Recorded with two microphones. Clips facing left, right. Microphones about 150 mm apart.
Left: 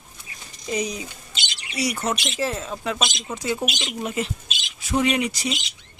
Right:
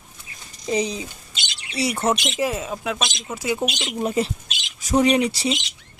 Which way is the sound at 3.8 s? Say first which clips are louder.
Right 4 dB; 35° right (ahead or behind).